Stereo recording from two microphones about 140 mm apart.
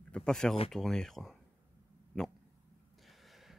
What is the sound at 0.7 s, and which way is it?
Speech, 5° left (ahead or behind).